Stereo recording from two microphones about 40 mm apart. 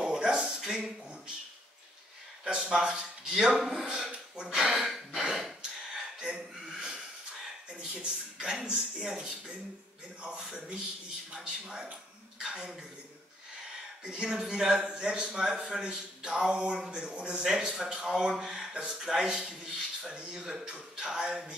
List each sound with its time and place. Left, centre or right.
0.0 s a sound: centre
0.7 s speech: centre
2.4 s speech: centre
5.3 s snort: centre
7.8 s a man's voice: centre
14.2 s a man's voice: centre
17.5 s a man's voice: centre